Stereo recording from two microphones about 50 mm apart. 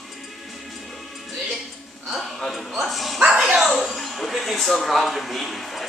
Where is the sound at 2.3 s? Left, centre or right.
Centre.